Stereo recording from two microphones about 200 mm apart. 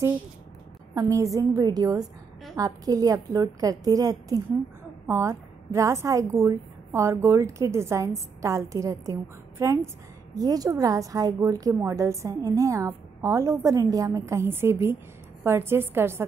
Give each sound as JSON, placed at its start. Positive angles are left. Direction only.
{"t": 0.9, "sound": "a woman's voice", "side_deg": -15}